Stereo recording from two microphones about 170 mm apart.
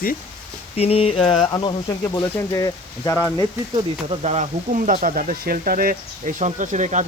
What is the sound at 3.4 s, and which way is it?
Speech, 30° right (ahead or behind).